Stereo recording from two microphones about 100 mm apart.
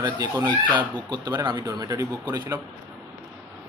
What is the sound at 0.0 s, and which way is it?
Speech, 40° right (ahead or behind).